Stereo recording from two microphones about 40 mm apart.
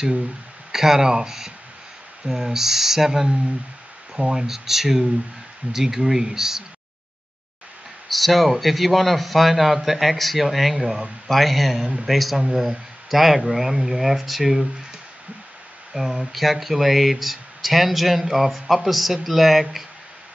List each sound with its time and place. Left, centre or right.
0.7 s speech: centre
4.2 s speech: centre
8.1 s speech: centre
11.2 s speech: centre
12.4 s speech: centre
12.6 s speech: centre
15.9 s speech: centre